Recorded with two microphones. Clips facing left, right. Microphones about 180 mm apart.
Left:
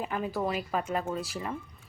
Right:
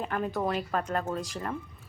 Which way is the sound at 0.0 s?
5° left (ahead or behind).